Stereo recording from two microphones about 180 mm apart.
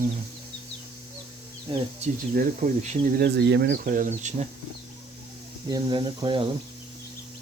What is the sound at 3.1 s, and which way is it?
Speech, 70° right (ahead or behind).